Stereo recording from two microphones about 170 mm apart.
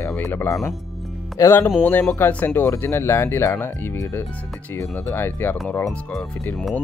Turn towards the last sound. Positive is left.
turn(degrees=0)  # may be behind; listen again after turning